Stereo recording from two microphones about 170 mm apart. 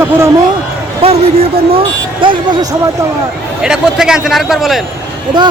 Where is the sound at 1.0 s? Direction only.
35° right (ahead or behind).